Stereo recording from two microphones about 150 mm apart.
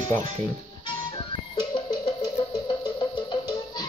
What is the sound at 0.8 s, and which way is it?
Music, 30° left (ahead or behind).